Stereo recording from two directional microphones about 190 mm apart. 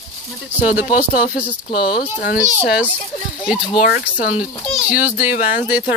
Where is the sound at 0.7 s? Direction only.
10° right (ahead or behind).